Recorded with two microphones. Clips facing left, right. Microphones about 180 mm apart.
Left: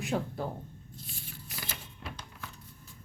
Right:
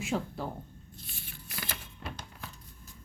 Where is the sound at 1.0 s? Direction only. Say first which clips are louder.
Left 3 dB; 65° right (ahead or behind).